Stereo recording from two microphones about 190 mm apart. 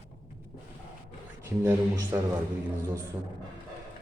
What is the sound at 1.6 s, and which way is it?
Speech, 15° right (ahead or behind).